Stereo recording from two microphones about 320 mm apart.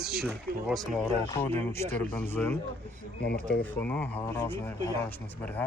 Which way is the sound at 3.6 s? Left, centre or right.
Centre.